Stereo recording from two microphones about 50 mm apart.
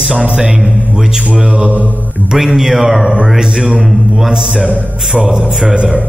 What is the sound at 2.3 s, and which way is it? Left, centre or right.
A man's voice, centre.